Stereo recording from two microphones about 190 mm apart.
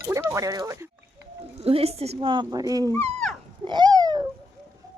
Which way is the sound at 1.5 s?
30° right (ahead or behind).